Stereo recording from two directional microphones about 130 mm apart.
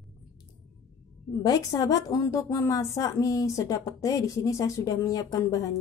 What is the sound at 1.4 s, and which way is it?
A woman's voice, 30° left (ahead or behind).